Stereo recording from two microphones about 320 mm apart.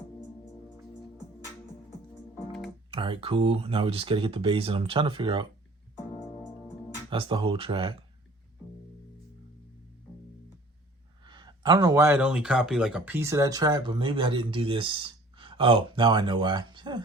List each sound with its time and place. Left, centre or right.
2.9 s speech: centre
7.1 s speech: centre
11.2 s speech: centre